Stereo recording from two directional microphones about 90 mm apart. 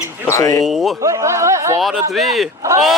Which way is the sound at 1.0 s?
35° right (ahead or behind).